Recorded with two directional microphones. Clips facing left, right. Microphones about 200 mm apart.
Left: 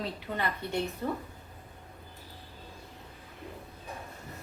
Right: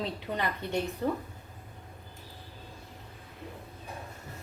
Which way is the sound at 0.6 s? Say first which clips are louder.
Right 1 dB; 20° right (ahead or behind).